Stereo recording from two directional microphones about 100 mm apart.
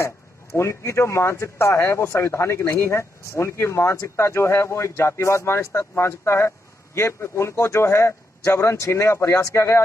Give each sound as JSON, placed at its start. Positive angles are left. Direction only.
{"t": 0.5, "sound": "speech", "side_deg": 25}